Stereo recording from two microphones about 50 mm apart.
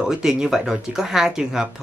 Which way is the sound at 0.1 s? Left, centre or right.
Centre.